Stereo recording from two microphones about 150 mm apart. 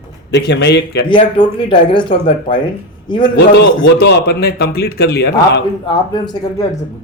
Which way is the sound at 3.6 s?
90° left.